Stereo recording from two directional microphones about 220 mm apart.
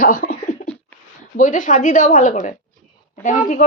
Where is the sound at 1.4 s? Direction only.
35° left (ahead or behind).